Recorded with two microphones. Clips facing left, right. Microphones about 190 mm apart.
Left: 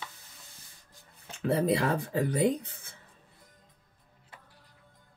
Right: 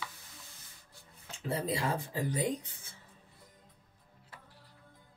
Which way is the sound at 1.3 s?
65° left (ahead or behind).